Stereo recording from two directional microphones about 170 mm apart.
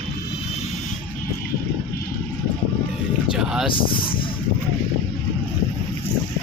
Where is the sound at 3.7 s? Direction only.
30° left (ahead or behind).